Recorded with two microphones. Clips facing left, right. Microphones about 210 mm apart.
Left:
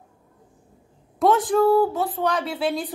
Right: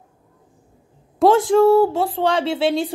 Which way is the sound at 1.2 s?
25° right (ahead or behind).